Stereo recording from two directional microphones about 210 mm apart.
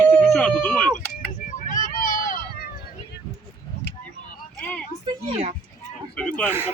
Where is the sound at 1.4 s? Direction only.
40° left (ahead or behind).